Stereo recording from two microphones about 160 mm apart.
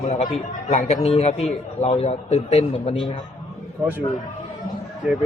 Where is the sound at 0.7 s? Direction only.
45° left (ahead or behind).